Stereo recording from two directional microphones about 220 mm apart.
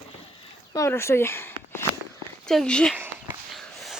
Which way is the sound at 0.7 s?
10° left (ahead or behind).